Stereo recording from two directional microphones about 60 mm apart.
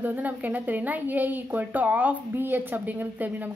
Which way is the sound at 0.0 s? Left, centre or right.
Right.